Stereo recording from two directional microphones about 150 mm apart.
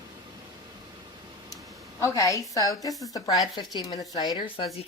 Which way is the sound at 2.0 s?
20° left (ahead or behind).